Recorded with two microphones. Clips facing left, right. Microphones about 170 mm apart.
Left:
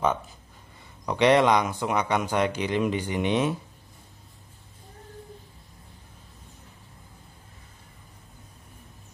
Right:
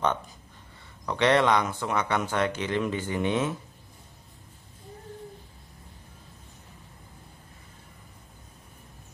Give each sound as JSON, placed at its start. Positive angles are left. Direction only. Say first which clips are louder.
{"t": 1.0, "sound": "speech", "louder": "left 3 dB", "side_deg": 15}